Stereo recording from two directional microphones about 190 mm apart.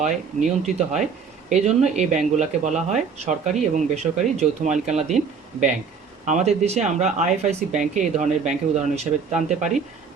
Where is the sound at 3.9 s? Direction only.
35° right (ahead or behind).